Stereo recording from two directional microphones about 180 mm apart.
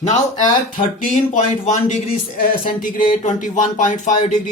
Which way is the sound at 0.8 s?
45° left (ahead or behind).